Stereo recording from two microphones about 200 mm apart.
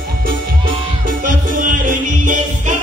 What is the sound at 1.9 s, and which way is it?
Music, 40° right (ahead or behind).